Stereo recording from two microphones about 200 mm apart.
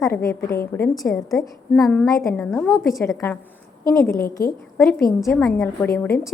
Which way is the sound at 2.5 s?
Centre (ahead or behind).